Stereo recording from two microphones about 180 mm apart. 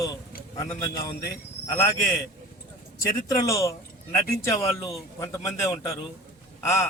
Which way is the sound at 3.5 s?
15° left (ahead or behind).